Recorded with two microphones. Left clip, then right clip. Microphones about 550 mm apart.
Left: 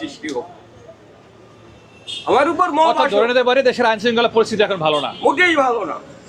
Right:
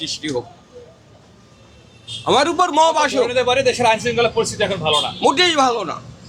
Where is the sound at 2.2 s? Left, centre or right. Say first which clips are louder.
Even; right.